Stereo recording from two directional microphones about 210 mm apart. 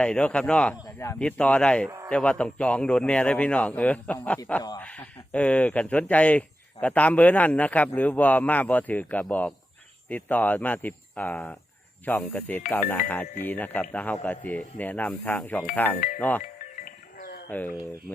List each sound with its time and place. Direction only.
0.0 s a man's voice: 5° left (ahead or behind)
16.4 s music: 45° left (ahead or behind)
17.5 s speech: 10° left (ahead or behind)